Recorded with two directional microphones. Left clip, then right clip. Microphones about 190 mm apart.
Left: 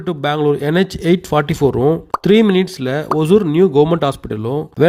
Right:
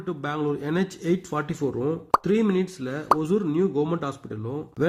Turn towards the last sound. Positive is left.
turn(degrees=45)  # may be behind; listen again after turning